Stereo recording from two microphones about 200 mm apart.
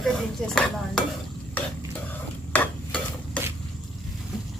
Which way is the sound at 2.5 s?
5° left (ahead or behind).